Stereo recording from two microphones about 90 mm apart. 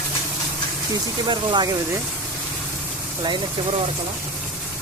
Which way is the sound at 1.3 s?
55° right (ahead or behind).